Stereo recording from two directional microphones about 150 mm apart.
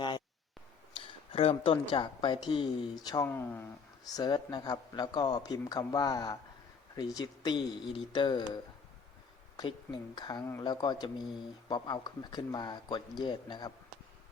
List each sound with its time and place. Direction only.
0.9 s a woman's voice: 40° left (ahead or behind)
3.2 s speech: 15° left (ahead or behind)
4.0 s speech: 25° left (ahead or behind)
9.6 s speech: 25° left (ahead or behind)